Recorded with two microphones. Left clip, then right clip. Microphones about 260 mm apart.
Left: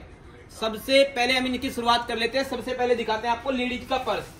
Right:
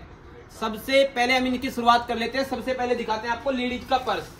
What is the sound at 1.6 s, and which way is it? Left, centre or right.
Speech, centre.